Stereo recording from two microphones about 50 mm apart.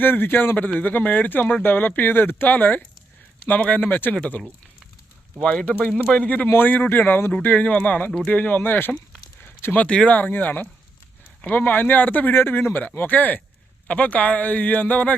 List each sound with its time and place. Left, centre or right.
0.0 s speech: left
5.5 s speech: left
9.7 s speech: left
10.2 s speech: left